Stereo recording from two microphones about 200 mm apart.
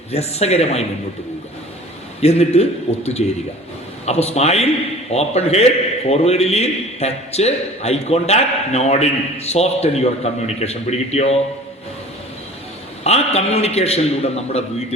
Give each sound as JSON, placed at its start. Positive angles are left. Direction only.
{"t": 0.1, "sound": "a man's voice", "side_deg": 30}
{"t": 2.2, "sound": "a man's voice", "side_deg": 30}
{"t": 13.1, "sound": "a man's voice", "side_deg": 30}